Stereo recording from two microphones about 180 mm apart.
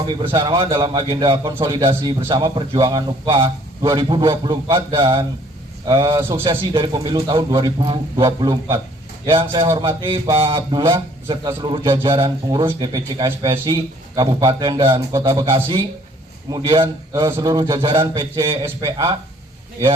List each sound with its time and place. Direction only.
0.1 s a man's voice: 25° right (ahead or behind)